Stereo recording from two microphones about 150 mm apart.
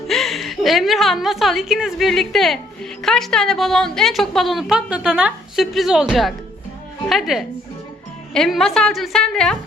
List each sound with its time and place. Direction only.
0.1 s a woman's voice: centre (ahead or behind)